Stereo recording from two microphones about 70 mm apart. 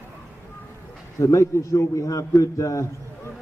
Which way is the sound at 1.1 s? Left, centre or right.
Left.